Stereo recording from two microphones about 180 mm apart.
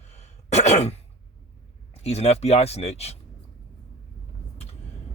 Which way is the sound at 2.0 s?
35° left (ahead or behind).